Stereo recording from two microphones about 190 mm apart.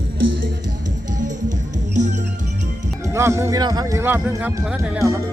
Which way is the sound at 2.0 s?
40° right (ahead or behind).